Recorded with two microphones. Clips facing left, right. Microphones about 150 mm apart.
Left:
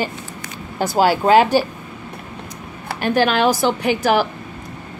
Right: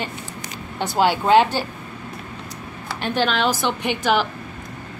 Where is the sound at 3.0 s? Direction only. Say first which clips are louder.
Left 5 dB; 10° left (ahead or behind).